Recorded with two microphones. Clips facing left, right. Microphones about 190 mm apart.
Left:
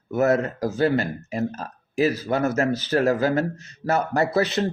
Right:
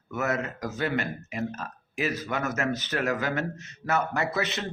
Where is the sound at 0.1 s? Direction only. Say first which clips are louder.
Left 9 dB; 35° left (ahead or behind).